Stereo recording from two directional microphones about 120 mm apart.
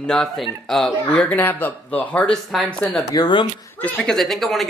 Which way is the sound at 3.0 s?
30° left (ahead or behind).